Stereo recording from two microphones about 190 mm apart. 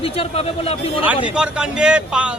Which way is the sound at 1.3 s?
5° right (ahead or behind).